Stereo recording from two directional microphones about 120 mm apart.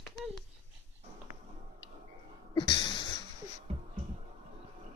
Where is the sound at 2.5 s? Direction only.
40° left (ahead or behind).